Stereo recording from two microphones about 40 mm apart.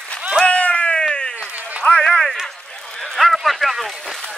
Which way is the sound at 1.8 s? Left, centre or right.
Left.